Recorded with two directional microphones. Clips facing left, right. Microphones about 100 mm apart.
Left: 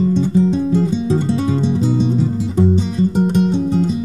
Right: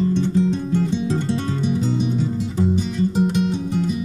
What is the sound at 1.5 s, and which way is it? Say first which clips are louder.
Music: left 5 dB; 30° left (ahead or behind).